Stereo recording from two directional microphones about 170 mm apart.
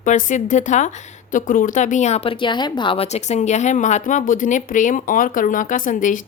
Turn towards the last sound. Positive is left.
turn(degrees=50)  # may be behind; listen again after turning